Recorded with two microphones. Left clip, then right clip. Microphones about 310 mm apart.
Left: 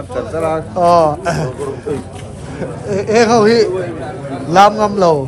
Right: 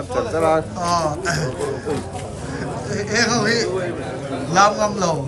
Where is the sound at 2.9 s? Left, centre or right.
Centre.